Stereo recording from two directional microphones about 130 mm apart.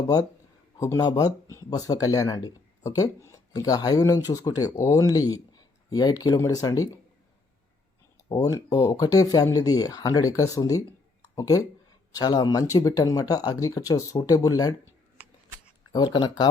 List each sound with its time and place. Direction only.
0.8 s speech: 25° left (ahead or behind)
8.3 s speech: 25° left (ahead or behind)
16.1 s speech: 35° left (ahead or behind)